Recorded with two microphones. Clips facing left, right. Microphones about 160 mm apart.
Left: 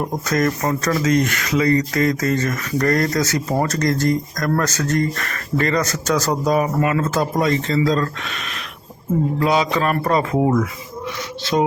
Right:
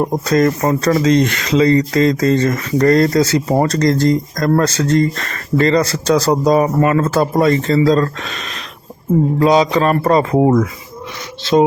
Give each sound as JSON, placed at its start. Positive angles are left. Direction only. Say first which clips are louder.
{"t": 0.0, "sound": "speech", "louder": "right 6 dB", "side_deg": -30}
{"t": 7.7, "sound": "speech", "louder": "right 6 dB", "side_deg": -35}